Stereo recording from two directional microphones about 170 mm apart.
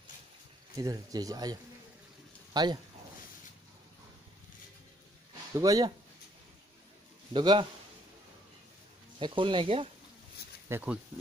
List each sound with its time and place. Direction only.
0.7 s speech: 20° right (ahead or behind)
5.5 s speech: 20° right (ahead or behind)
7.3 s speech: 25° right (ahead or behind)
9.2 s speech: 30° right (ahead or behind)
10.7 s speech: 10° right (ahead or behind)